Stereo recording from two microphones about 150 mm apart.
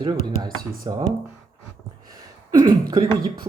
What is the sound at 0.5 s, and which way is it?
Speech, 25° right (ahead or behind).